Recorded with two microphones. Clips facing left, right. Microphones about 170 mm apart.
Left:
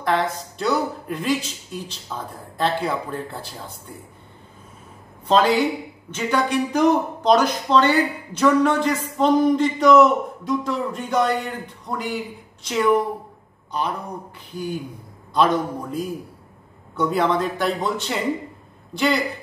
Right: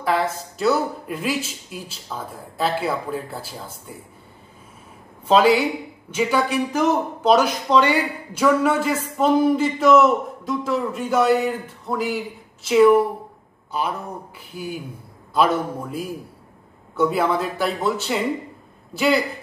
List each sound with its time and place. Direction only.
0.0 s a man's voice: 5° right (ahead or behind)
5.3 s a man's voice: 10° right (ahead or behind)
15.3 s a man's voice: 5° right (ahead or behind)